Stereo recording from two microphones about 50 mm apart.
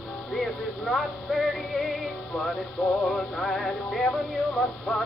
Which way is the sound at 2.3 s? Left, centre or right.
Centre.